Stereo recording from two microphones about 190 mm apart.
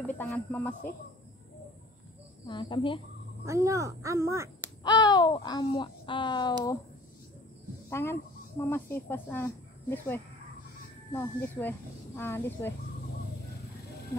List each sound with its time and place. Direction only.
0.0 s speech: 5° left (ahead or behind)
2.4 s speech: 25° left (ahead or behind)
3.4 s speech: 15° right (ahead or behind)
4.8 s speech: 20° left (ahead or behind)
7.9 s speech: 15° left (ahead or behind)